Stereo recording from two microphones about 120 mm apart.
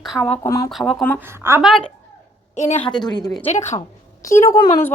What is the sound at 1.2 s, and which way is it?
Speech, 20° right (ahead or behind).